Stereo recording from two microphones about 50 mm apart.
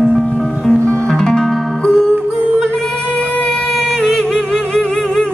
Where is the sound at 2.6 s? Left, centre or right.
Centre.